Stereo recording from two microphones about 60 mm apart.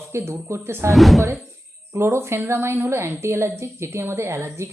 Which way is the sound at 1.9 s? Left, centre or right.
Right.